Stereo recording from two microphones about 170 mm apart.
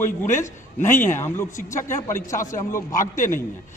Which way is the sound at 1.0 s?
15° left (ahead or behind).